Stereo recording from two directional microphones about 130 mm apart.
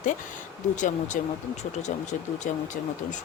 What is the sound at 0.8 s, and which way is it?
Speech, 70° left (ahead or behind).